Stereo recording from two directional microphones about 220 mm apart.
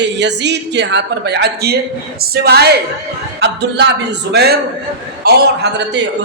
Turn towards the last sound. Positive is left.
turn(degrees=-50)  # may be behind; listen again after turning